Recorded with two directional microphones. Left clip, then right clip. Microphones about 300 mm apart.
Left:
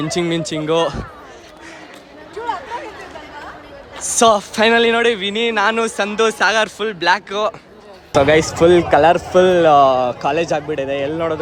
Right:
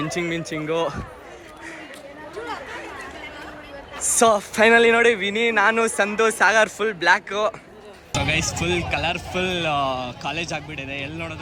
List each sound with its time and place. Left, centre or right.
0.1 s speech: centre
4.0 s speech: centre
8.1 s a man's voice: centre
9.1 s a man's voice: centre